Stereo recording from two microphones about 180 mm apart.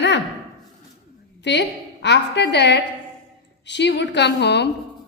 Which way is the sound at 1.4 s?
75° left (ahead or behind).